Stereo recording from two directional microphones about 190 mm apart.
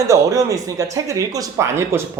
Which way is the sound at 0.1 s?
15° right (ahead or behind).